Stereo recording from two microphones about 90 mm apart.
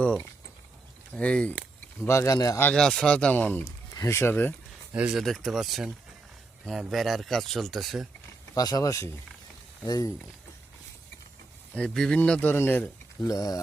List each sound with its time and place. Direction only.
1.1 s speech: 10° left (ahead or behind)
2.0 s speech: 35° left (ahead or behind)
2.7 s speech: 10° left (ahead or behind)
3.9 s speech: 30° left (ahead or behind)
5.1 s speech: 5° left (ahead or behind)
8.5 s speech: 45° left (ahead or behind)
11.7 s speech: 10° left (ahead or behind)
13.2 s speech: 40° left (ahead or behind)